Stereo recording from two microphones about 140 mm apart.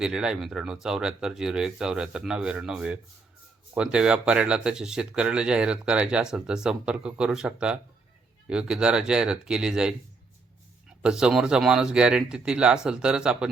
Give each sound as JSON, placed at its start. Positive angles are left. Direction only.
{"t": 0.0, "sound": "speech", "side_deg": -5}
{"t": 11.0, "sound": "speech", "side_deg": -5}